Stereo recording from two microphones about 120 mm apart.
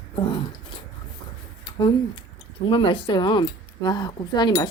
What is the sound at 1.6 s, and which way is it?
Speech, 35° left (ahead or behind).